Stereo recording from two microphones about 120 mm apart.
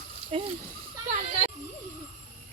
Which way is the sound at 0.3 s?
55° right (ahead or behind).